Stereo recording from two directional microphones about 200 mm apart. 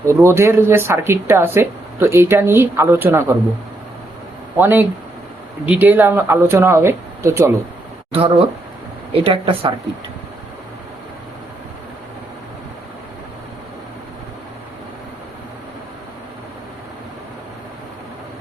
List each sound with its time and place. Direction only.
0.0 s speech: 15° right (ahead or behind)
4.5 s speech: 10° right (ahead or behind)
8.1 s speech: 30° right (ahead or behind)